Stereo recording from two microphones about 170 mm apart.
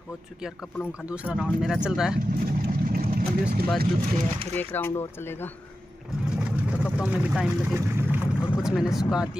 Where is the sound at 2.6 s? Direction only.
60° right (ahead or behind).